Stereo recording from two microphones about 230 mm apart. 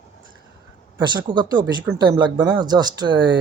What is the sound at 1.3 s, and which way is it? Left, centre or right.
Speech, centre.